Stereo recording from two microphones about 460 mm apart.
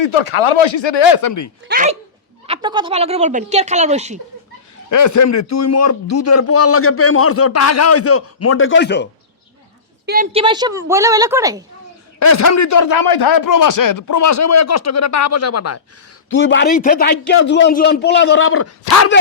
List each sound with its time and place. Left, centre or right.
0.0 s speech: left
1.6 s speech: centre
4.9 s a man's voice: left
10.1 s speech: centre
12.2 s a man's voice: left